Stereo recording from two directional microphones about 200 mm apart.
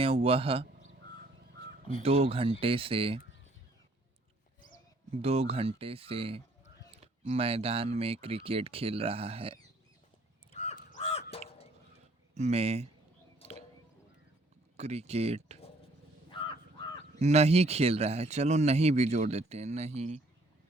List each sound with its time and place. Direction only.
0.0 s speech: 30° right (ahead or behind)
2.0 s speech: 30° right (ahead or behind)
5.2 s speech: 30° right (ahead or behind)
10.5 s crow: 35° left (ahead or behind)
12.3 s speech: 35° right (ahead or behind)
14.8 s speech: 35° right (ahead or behind)
16.3 s crow: 25° left (ahead or behind)
17.2 s speech: 35° right (ahead or behind)